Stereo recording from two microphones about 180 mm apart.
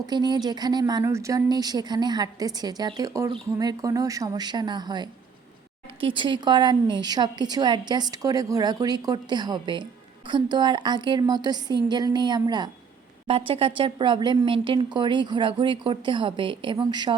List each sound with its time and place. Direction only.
0.1 s speech: 25° right (ahead or behind)